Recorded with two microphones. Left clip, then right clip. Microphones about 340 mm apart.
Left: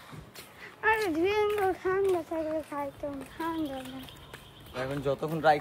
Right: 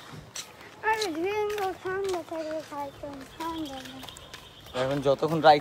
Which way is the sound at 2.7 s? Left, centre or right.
Left.